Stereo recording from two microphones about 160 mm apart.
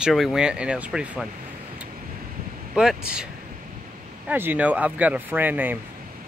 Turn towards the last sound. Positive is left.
turn(degrees=-10)  # may be behind; listen again after turning